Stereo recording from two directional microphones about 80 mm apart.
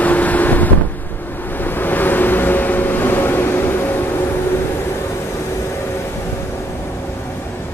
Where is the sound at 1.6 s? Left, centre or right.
Left.